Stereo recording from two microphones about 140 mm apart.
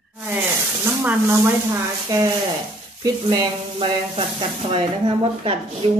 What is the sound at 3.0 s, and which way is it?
Sizzle, 30° right (ahead or behind).